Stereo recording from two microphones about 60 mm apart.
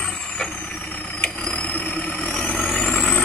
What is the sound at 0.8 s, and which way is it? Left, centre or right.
Vehicle, left.